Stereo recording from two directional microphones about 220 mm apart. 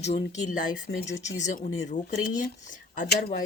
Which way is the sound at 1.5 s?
40° left (ahead or behind).